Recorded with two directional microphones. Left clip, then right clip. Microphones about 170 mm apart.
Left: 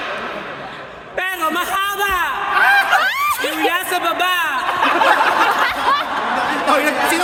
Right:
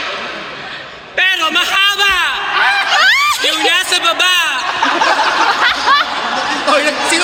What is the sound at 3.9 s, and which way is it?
Speech, 65° left (ahead or behind).